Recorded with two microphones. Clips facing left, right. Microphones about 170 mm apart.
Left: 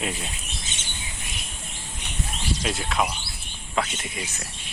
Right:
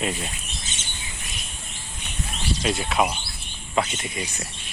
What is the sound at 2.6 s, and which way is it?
Speech, centre (ahead or behind).